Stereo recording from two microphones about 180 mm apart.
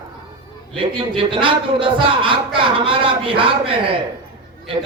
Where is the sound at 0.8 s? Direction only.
30° right (ahead or behind).